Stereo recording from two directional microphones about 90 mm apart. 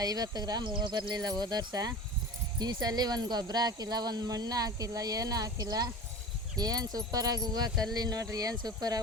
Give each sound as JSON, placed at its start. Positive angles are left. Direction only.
{"t": 0.0, "sound": "speech", "side_deg": -50}